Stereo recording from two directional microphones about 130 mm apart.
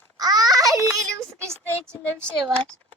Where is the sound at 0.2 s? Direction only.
30° right (ahead or behind).